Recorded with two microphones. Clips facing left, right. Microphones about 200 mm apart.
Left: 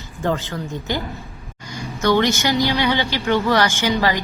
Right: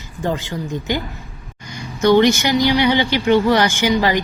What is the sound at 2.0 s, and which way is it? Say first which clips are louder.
A woman's voice: right 5 dB; 15° right (ahead or behind).